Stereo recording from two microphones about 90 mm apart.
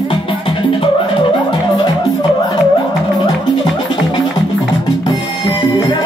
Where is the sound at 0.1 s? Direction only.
75° left (ahead or behind).